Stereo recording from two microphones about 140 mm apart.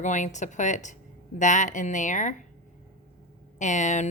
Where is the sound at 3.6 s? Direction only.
60° left (ahead or behind).